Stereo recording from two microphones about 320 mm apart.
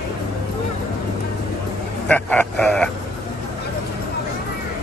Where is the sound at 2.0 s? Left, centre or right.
Centre.